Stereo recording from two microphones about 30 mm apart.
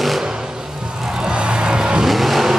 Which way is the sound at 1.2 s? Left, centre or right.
Right.